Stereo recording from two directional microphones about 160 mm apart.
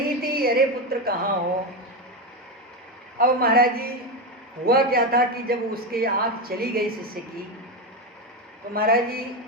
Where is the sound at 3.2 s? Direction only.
70° right (ahead or behind).